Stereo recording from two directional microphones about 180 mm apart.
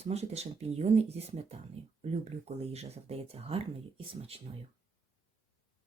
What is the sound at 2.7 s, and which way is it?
Speech, 35° right (ahead or behind).